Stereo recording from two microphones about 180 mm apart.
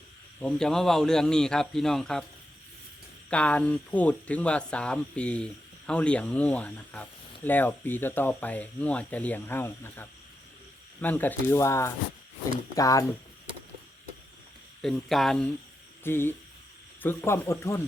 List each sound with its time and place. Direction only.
0.3 s speech: 5° left (ahead or behind)
3.2 s speech: 5° left (ahead or behind)
14.8 s speech: centre (ahead or behind)
16.0 s speech: 10° left (ahead or behind)